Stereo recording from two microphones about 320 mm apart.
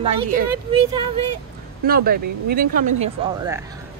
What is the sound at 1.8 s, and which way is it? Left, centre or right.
Speech, right.